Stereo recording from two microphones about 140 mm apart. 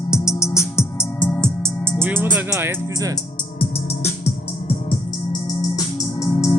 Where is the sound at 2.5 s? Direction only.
20° right (ahead or behind).